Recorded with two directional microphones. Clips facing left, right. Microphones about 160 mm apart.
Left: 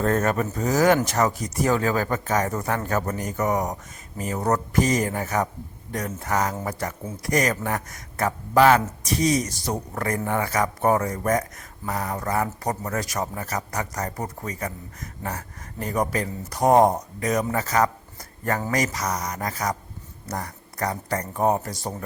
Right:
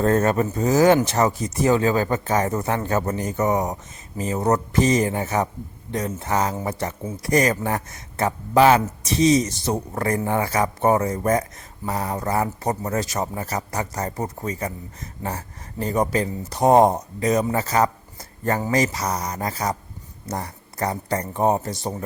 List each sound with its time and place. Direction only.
0.0 s a man's voice: 30° right (ahead or behind)